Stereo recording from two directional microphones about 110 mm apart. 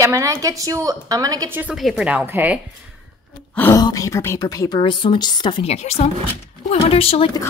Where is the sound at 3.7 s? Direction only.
30° left (ahead or behind).